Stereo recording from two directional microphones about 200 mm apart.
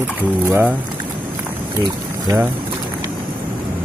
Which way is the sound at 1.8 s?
15° right (ahead or behind).